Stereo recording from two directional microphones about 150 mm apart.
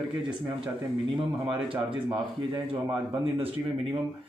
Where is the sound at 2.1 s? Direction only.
25° right (ahead or behind).